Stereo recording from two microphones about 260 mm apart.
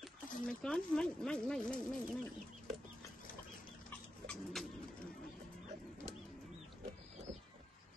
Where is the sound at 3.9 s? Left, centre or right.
Centre.